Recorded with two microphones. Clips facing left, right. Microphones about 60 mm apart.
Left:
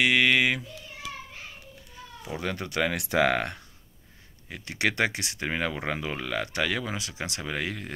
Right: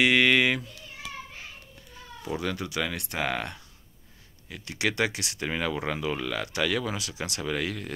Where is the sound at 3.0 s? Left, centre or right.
Left.